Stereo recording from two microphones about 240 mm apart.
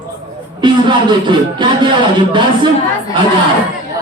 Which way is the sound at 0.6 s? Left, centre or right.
Centre.